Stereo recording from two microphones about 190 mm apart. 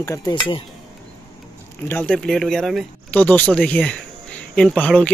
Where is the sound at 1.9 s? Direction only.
5° left (ahead or behind).